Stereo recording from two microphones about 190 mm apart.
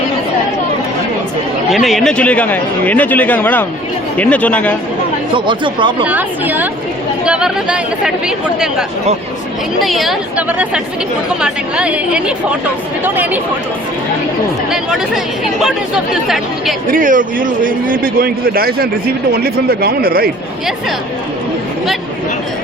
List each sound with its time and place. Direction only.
1.7 s speech: centre (ahead or behind)
5.3 s speech: 25° right (ahead or behind)
6.1 s speech: 10° right (ahead or behind)
9.8 s speech: centre (ahead or behind)
14.7 s speech: centre (ahead or behind)
16.9 s a man's voice: 45° right (ahead or behind)